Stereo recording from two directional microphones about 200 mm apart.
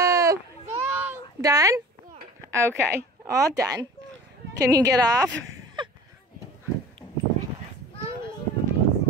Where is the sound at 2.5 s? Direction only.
15° right (ahead or behind).